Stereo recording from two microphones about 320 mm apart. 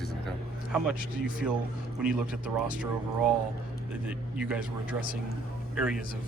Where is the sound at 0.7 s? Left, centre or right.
Centre.